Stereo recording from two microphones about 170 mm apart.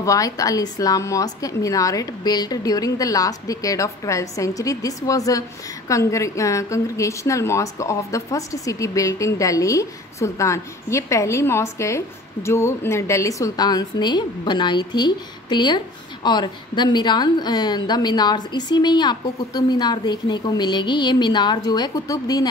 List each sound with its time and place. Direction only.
0.0 s a woman's voice: 20° left (ahead or behind)